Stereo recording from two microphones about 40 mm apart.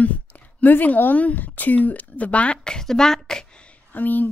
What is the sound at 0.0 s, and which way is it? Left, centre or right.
Speech, left.